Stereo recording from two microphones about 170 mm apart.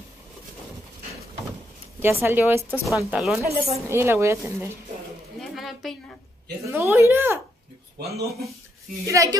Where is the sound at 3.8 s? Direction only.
15° right (ahead or behind).